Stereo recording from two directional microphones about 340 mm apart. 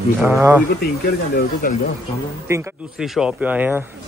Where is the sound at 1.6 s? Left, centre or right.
Left.